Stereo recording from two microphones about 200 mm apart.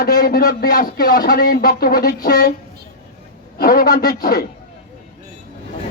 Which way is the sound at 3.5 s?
50° left (ahead or behind).